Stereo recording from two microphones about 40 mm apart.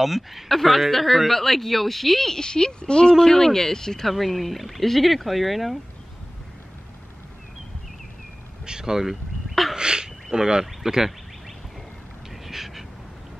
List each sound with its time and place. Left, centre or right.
0.0 s speech: centre
4.1 s speech: centre
8.6 s a sound: centre
9.8 s a sound: right
10.3 s speech: centre
12.4 s duck: centre